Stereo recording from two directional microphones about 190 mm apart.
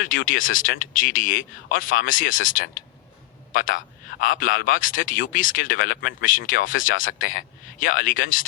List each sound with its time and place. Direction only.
0.0 s a man's voice: 45° left (ahead or behind)